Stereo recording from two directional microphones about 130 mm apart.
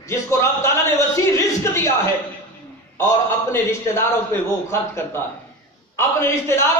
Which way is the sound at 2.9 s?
20° left (ahead or behind).